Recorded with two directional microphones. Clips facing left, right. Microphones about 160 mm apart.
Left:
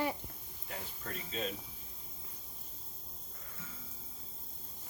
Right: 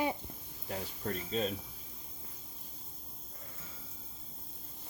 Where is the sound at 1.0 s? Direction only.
35° right (ahead or behind).